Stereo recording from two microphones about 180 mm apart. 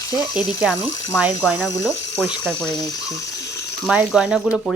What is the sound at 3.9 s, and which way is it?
Speech, 5° right (ahead or behind).